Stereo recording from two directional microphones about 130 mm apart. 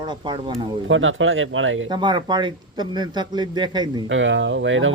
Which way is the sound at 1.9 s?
35° right (ahead or behind).